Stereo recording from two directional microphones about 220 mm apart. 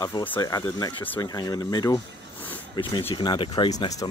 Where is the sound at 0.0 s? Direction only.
20° left (ahead or behind).